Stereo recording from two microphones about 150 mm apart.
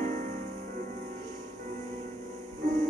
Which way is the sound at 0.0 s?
55° right (ahead or behind).